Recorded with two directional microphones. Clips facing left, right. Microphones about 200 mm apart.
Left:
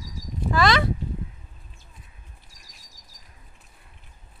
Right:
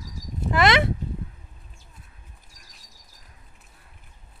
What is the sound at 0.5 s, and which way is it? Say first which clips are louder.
Speech: right 1 dB; 25° right (ahead or behind).